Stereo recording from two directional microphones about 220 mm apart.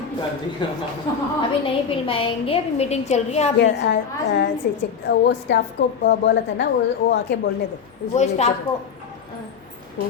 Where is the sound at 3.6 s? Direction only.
50° left (ahead or behind).